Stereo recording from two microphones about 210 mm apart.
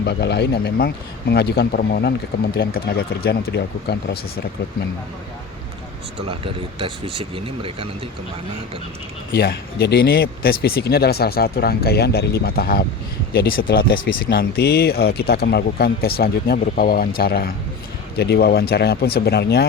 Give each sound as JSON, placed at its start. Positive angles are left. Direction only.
{"t": 0.0, "sound": "speech", "side_deg": 50}
{"t": 6.1, "sound": "speech", "side_deg": -25}
{"t": 9.3, "sound": "speech", "side_deg": 50}